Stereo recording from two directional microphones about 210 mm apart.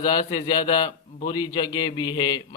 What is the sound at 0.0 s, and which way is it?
A man's voice, 20° left (ahead or behind).